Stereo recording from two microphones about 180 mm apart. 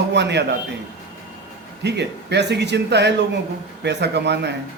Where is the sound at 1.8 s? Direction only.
70° right (ahead or behind).